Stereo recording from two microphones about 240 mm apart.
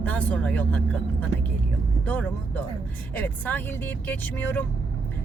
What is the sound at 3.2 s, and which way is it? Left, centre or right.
Speech, centre.